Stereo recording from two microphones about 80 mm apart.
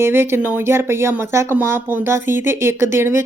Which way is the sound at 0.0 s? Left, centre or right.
Right.